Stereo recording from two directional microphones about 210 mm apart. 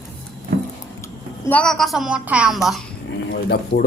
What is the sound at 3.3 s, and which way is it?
Speech, 50° left (ahead or behind).